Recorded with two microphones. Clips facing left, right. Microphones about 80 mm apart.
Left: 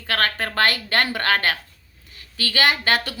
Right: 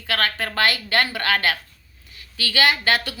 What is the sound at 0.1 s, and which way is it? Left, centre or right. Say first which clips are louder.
A woman's voice: left 1 dB; left.